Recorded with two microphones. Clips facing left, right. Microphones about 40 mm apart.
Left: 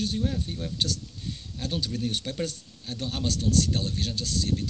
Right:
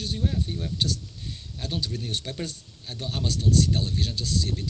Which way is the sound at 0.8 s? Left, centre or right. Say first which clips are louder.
Even; centre.